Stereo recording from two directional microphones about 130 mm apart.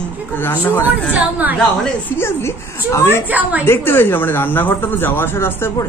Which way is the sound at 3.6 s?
15° left (ahead or behind).